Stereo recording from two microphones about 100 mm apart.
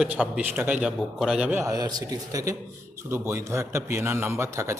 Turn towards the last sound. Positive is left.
turn(degrees=-30)  # may be behind; listen again after turning